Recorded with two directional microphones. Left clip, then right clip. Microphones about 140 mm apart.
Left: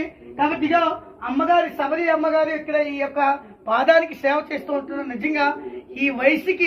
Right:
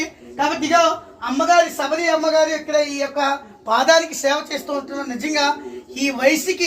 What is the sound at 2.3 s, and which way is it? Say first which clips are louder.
A man's voice: right 3 dB; 45° right (ahead or behind).